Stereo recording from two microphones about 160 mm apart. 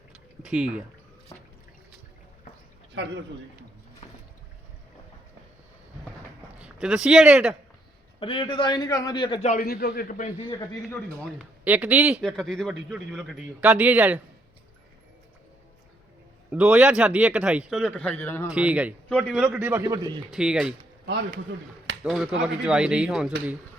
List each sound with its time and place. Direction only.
0.4 s a man's voice: 5° right (ahead or behind)
3.0 s a man's voice: 90° right
6.6 s speech: 5° right (ahead or behind)
8.2 s a man's voice: 30° left (ahead or behind)
9.4 s a man's voice: 50° left (ahead or behind)
9.6 s a man's voice: 70° left (ahead or behind); by 10.4 s 50° left (ahead or behind)
11.3 s a man's voice: 10° right (ahead or behind)
12.2 s a man's voice: 5° left (ahead or behind)
16.5 s a man's voice: 10° right (ahead or behind); by 18.5 s 15° left (ahead or behind)
18.5 s a man's voice: 5° right (ahead or behind)
19.0 s a man's voice: 5° left (ahead or behind); by 20.2 s 25° right (ahead or behind)
20.3 s a man's voice: 5° right (ahead or behind)
22.0 s a man's voice: centre (ahead or behind)